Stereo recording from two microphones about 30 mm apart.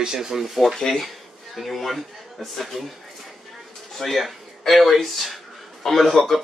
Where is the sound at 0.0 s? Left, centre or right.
Centre.